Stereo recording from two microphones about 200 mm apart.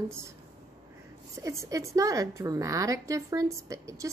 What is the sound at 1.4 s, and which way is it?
A woman's voice, 15° right (ahead or behind).